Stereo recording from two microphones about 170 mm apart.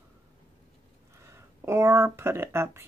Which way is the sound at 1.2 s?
15° right (ahead or behind).